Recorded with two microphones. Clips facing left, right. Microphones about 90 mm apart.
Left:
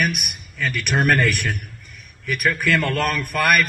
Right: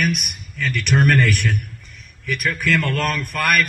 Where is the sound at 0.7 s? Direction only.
10° left (ahead or behind).